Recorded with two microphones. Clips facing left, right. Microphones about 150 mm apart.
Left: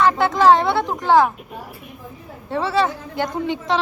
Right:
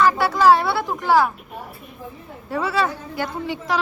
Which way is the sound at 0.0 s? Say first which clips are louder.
Left 1 dB; 20° left (ahead or behind).